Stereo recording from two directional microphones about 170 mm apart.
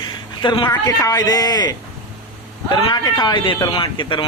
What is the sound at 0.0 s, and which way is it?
A man's voice, 25° left (ahead or behind).